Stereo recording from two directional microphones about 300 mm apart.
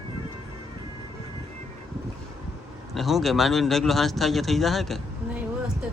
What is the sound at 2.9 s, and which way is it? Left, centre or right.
A man's voice, centre.